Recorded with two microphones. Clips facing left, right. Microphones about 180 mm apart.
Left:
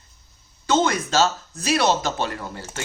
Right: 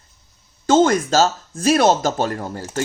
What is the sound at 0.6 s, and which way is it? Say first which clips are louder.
Speech: right 6 dB; 45° right (ahead or behind).